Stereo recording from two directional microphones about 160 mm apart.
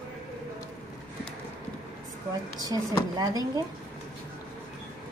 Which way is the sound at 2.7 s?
25° right (ahead or behind).